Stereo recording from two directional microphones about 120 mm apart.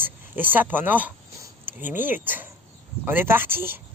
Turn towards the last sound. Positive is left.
turn(degrees=-20)  # may be behind; listen again after turning